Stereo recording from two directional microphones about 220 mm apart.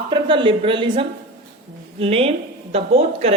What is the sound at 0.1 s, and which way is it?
A woman's voice, 20° right (ahead or behind).